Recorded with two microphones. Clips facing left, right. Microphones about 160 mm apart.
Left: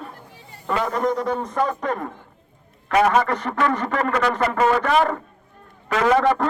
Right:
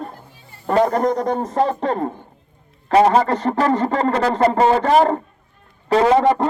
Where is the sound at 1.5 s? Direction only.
30° right (ahead or behind).